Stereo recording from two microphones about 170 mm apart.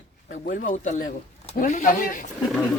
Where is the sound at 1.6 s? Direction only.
50° left (ahead or behind).